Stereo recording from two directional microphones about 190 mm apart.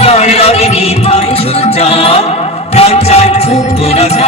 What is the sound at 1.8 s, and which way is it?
Music, 35° left (ahead or behind).